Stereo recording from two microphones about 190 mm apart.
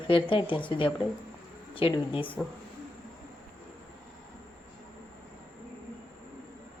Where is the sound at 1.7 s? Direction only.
30° left (ahead or behind).